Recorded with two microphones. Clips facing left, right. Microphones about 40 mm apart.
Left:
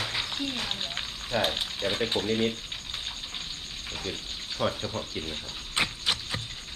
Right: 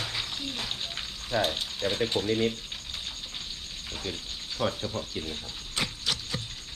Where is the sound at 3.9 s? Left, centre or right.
Centre.